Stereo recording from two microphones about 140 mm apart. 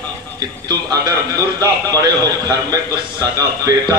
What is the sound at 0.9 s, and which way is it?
Speech, 25° right (ahead or behind).